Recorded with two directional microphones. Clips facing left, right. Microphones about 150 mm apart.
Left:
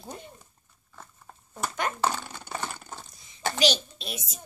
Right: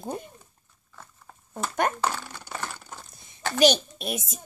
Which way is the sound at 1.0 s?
10° left (ahead or behind).